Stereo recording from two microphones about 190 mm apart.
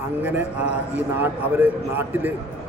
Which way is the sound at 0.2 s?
10° right (ahead or behind).